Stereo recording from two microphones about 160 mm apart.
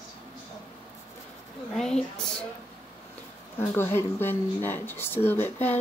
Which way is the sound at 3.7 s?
15° left (ahead or behind).